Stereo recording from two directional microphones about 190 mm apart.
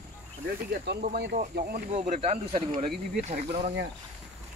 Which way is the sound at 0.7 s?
60° right (ahead or behind).